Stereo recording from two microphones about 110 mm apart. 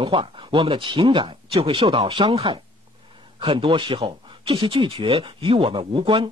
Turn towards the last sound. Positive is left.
turn(degrees=-50)  # may be behind; listen again after turning